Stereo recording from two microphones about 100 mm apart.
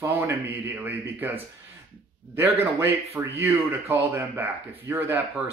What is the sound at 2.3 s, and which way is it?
Speech, 25° right (ahead or behind).